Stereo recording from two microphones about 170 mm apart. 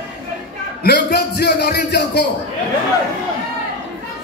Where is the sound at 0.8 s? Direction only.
60° left (ahead or behind).